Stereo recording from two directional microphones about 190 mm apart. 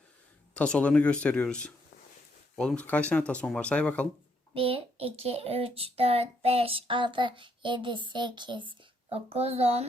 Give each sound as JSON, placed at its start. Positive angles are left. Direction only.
{"t": 0.5, "sound": "speech", "side_deg": 5}
{"t": 4.5, "sound": "a child's voice", "side_deg": -30}